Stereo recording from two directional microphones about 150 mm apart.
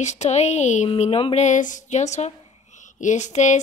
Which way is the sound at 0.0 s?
50° left (ahead or behind).